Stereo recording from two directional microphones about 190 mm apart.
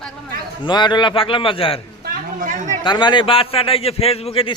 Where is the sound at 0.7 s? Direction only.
25° left (ahead or behind).